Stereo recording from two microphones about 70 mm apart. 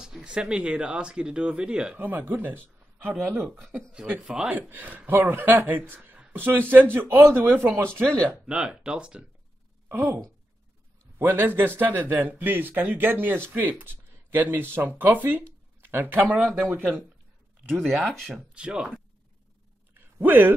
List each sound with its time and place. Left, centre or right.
0.0 s speech: centre
2.0 s speech: right
4.2 s speech: centre
4.5 s a man's voice: right
8.0 s speech: centre
8.5 s speech: centre
9.8 s speech: right
11.1 s a man's voice: right
17.8 s speech: centre
18.5 s speech: centre
19.9 s a sound: right